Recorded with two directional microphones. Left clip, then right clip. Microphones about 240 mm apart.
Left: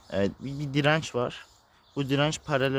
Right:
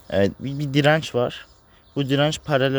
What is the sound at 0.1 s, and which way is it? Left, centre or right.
Speech, centre.